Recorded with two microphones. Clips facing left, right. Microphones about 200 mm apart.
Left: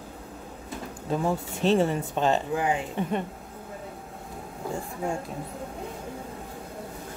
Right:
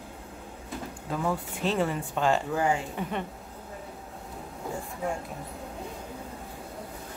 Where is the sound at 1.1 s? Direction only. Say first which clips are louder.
Left 3 dB; 25° left (ahead or behind).